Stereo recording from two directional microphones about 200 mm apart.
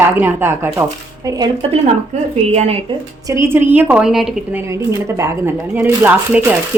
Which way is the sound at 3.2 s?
15° right (ahead or behind).